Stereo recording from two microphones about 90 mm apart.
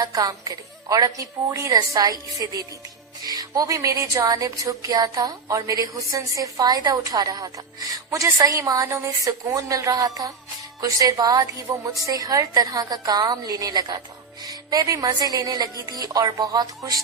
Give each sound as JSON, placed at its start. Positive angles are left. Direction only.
{"t": 0.0, "sound": "a woman's voice", "side_deg": -40}